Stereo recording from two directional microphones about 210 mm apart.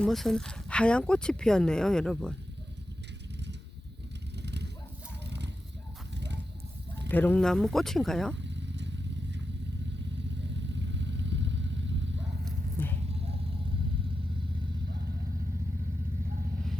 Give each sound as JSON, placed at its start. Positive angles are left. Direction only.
{"t": 0.0, "sound": "speech", "side_deg": 0}
{"t": 4.4, "sound": "a sound", "side_deg": -55}
{"t": 7.1, "sound": "speech", "side_deg": 10}
{"t": 8.4, "sound": "vehicle", "side_deg": -55}
{"t": 10.8, "sound": "vehicle", "side_deg": -60}
{"t": 12.8, "sound": "a sound", "side_deg": 10}